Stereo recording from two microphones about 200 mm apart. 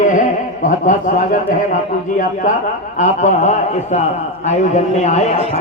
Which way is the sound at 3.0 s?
35° left (ahead or behind).